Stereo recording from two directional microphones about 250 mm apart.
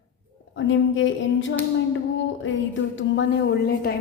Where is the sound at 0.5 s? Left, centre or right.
Left.